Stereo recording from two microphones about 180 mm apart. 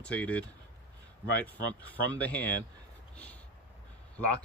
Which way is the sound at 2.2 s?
10° left (ahead or behind).